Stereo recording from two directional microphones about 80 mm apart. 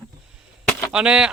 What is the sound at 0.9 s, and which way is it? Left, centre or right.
Speech, centre.